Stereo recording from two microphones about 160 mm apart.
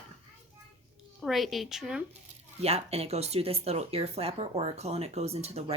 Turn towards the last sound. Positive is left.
turn(degrees=-40)  # may be behind; listen again after turning